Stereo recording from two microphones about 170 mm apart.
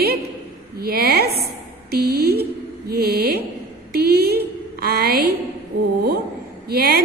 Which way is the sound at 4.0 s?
65° right (ahead or behind).